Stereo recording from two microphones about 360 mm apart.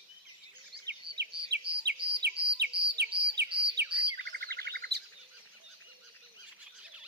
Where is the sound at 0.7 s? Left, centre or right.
Right.